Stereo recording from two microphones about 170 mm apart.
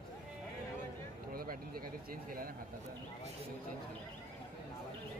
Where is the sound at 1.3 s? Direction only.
60° right (ahead or behind).